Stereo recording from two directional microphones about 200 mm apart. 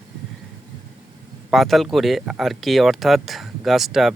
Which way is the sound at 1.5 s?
Centre (ahead or behind).